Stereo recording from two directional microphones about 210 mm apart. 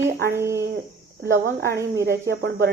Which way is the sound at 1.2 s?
50° right (ahead or behind).